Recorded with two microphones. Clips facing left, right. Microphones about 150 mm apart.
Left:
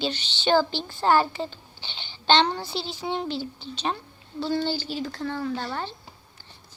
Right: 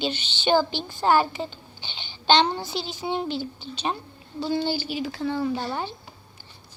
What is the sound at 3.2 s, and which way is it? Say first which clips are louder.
Speech: right 1 dB; 30° left (ahead or behind).